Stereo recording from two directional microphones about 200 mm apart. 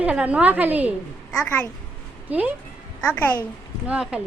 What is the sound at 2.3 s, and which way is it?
Speech, 10° right (ahead or behind).